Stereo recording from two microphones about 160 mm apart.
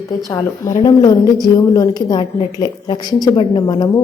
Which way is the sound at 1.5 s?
25° left (ahead or behind).